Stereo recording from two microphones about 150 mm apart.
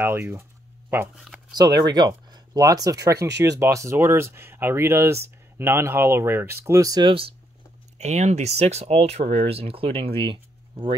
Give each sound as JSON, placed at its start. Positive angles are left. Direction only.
{"t": 0.0, "sound": "speech", "side_deg": -15}
{"t": 1.5, "sound": "speech", "side_deg": -25}
{"t": 8.0, "sound": "speech", "side_deg": -50}